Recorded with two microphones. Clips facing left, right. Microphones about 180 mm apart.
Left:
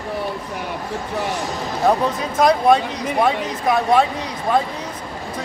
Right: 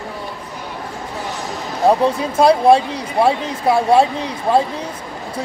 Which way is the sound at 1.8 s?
30° right (ahead or behind).